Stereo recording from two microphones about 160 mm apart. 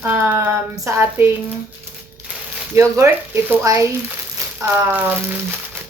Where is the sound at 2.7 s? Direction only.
15° right (ahead or behind).